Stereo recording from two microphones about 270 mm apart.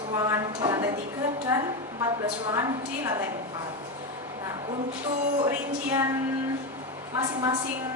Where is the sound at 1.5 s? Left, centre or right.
Centre.